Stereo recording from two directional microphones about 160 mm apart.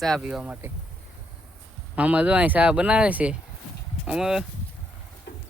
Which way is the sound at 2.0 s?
10° right (ahead or behind).